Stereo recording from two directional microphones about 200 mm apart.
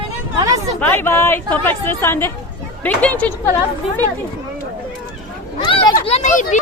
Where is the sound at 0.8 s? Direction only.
10° left (ahead or behind).